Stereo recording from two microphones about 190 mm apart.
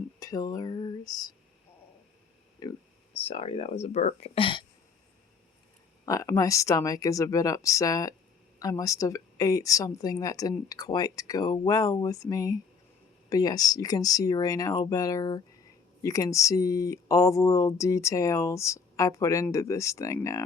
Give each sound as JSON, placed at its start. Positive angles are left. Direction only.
{"t": 0.2, "sound": "a woman's voice", "side_deg": 20}
{"t": 2.6, "sound": "speech", "side_deg": 25}
{"t": 6.1, "sound": "a woman's voice", "side_deg": 15}